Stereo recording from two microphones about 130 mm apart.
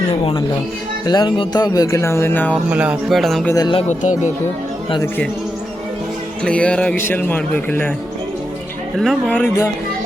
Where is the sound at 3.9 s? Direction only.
65° left (ahead or behind).